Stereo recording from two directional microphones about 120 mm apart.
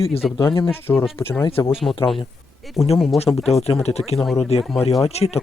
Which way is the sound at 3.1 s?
60° left (ahead or behind).